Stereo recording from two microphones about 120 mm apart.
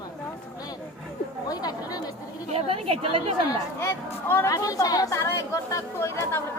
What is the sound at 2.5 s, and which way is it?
Speech, 55° right (ahead or behind).